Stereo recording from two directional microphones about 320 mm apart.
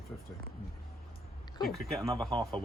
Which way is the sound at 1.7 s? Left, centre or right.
Centre.